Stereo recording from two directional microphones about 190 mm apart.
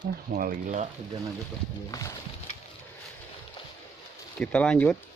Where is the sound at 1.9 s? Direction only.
20° left (ahead or behind).